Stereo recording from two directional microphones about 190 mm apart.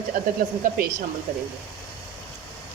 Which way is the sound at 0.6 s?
45° right (ahead or behind).